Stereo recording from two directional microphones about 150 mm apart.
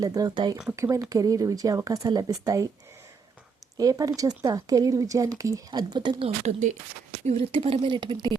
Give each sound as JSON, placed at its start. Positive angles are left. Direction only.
{"t": 0.0, "sound": "speech", "side_deg": -25}
{"t": 3.8, "sound": "speech", "side_deg": -25}